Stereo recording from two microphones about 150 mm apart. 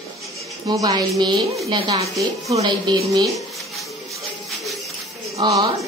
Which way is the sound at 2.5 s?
25° right (ahead or behind).